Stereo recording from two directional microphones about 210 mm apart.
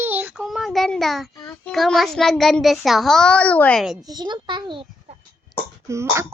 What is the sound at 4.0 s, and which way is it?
A child's voice, 20° right (ahead or behind).